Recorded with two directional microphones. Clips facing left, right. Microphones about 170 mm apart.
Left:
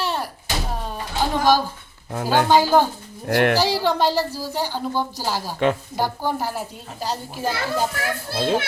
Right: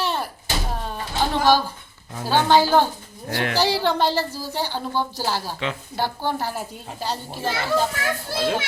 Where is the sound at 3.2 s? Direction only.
55° left (ahead or behind).